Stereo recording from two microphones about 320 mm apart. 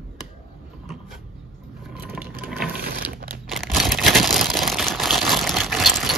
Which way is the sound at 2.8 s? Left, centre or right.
Right.